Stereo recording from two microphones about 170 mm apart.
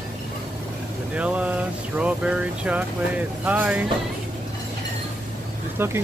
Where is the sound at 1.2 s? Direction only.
10° right (ahead or behind).